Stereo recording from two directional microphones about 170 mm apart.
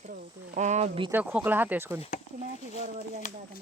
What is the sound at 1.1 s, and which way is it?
Speech, 10° right (ahead or behind).